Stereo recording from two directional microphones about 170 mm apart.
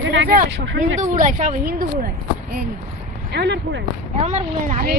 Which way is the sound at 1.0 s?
50° right (ahead or behind).